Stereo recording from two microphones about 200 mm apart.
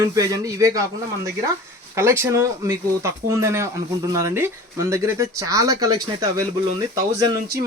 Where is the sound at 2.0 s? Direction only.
15° right (ahead or behind).